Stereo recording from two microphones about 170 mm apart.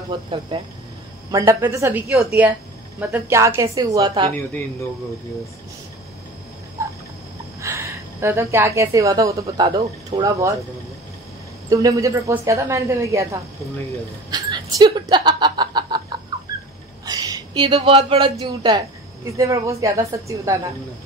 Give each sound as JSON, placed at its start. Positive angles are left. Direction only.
{"t": 0.1, "sound": "speech", "side_deg": -30}
{"t": 1.3, "sound": "a woman's voice", "side_deg": -20}
{"t": 6.8, "sound": "a sound", "side_deg": -15}
{"t": 7.6, "sound": "a woman's voice", "side_deg": -15}
{"t": 11.7, "sound": "a woman's voice", "side_deg": -20}
{"t": 14.3, "sound": "a sound", "side_deg": -25}
{"t": 17.0, "sound": "speech", "side_deg": -20}